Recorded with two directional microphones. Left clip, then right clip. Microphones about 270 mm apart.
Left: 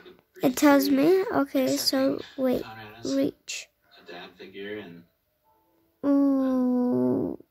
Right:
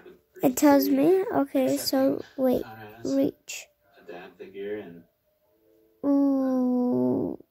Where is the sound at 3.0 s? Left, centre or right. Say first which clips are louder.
Right 1 dB; centre.